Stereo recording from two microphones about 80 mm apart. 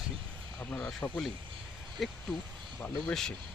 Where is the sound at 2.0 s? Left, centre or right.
Centre.